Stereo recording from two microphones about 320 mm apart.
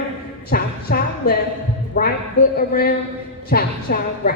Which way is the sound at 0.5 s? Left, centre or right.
Left.